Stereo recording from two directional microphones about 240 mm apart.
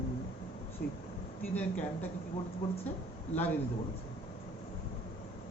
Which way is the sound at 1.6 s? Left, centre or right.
Centre.